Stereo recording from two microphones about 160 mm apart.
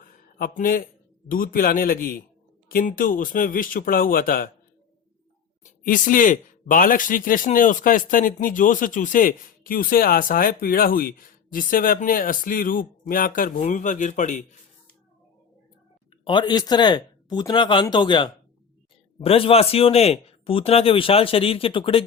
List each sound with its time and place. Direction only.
0.0 s a sound: 65° left (ahead or behind)
1.3 s speech: 65° left (ahead or behind)
5.6 s speech: 55° left (ahead or behind)
16.2 s a man's voice: 30° left (ahead or behind)